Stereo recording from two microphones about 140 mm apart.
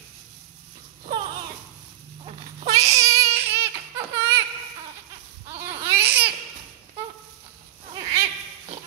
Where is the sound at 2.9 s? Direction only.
20° right (ahead or behind).